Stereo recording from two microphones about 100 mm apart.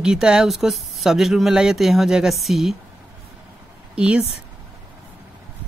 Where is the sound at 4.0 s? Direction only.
10° right (ahead or behind).